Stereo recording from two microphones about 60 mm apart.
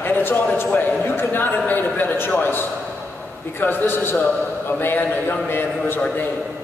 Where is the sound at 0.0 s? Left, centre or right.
Left.